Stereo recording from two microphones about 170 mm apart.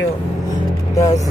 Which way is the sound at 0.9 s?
20° left (ahead or behind).